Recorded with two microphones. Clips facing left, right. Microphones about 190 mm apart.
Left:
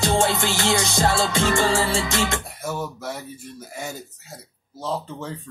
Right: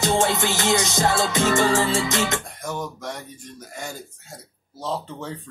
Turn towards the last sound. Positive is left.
turn(degrees=0)  # may be behind; listen again after turning